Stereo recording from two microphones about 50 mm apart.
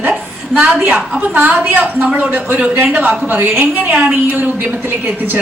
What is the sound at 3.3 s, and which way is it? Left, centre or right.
A woman's voice, right.